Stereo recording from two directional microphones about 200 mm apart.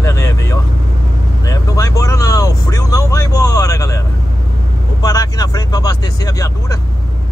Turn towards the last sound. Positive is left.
turn(degrees=15)  # may be behind; listen again after turning